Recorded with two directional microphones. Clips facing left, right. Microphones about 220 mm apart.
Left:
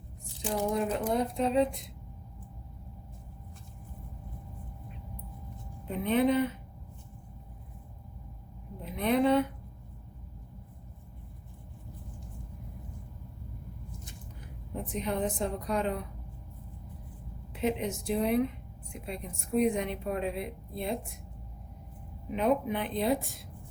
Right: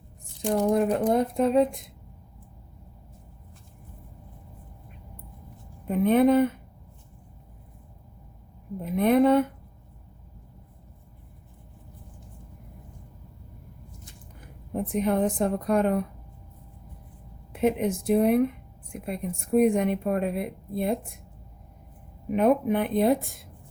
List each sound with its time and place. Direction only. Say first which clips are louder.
0.4 s speech: right 7 dB; 60° right (ahead or behind)
5.8 s speech: right 7 dB; 50° right (ahead or behind)
8.8 s speech: right 6 dB; 50° right (ahead or behind)
14.7 s speech: right 8 dB; 55° right (ahead or behind)
17.5 s speech: right 6 dB; 55° right (ahead or behind)
22.3 s speech: right 6 dB; 55° right (ahead or behind)